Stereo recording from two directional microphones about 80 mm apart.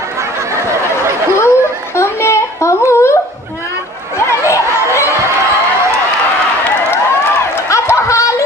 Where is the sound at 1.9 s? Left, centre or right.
Left.